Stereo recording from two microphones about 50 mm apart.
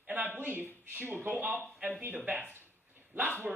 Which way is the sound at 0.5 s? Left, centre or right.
Right.